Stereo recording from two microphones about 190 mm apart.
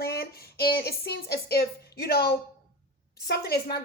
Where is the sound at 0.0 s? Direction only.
55° left (ahead or behind).